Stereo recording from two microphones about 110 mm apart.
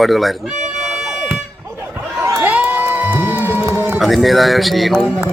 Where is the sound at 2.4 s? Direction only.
15° right (ahead or behind).